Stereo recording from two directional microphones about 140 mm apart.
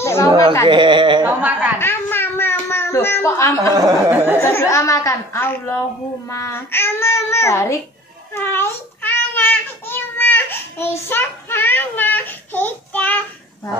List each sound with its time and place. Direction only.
0.0 s a sound: 20° left (ahead or behind)
0.7 s speech: 35° right (ahead or behind)
1.2 s speech: 10° right (ahead or behind)
1.8 s a sound: 15° left (ahead or behind)
4.1 s speech: 15° right (ahead or behind)
4.4 s a woman's voice: 15° left (ahead or behind)
8.3 s child singing: 15° left (ahead or behind)